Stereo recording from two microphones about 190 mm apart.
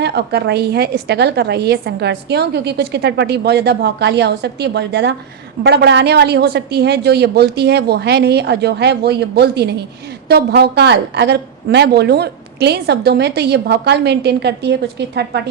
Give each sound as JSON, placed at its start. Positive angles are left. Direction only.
{"t": 0.0, "sound": "a woman's voice", "side_deg": -60}